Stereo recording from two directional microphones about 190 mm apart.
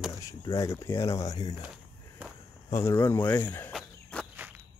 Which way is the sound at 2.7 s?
10° left (ahead or behind).